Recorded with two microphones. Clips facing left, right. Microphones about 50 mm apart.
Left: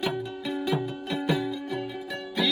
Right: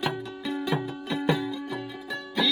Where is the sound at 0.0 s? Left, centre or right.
Centre.